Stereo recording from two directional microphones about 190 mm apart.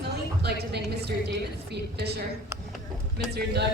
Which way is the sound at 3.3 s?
60° right (ahead or behind).